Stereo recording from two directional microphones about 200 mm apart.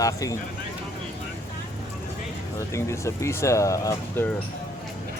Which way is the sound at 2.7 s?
15° left (ahead or behind).